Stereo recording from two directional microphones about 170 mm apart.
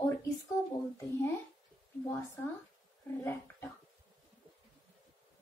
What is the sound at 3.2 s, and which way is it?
Speech, 15° left (ahead or behind).